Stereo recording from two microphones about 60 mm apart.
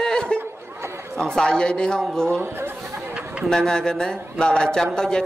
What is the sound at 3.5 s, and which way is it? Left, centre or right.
Speech, centre.